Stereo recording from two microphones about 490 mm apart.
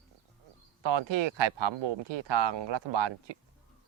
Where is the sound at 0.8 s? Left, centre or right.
Right.